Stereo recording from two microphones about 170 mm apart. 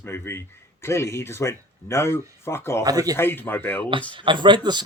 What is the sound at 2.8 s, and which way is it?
Speech, 20° right (ahead or behind).